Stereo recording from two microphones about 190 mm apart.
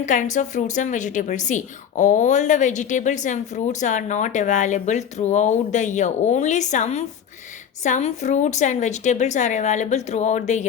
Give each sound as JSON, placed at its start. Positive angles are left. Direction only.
{"t": 0.0, "sound": "a woman's voice", "side_deg": 40}